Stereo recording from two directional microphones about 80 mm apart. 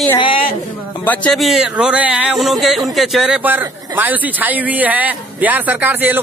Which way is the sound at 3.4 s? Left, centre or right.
Right.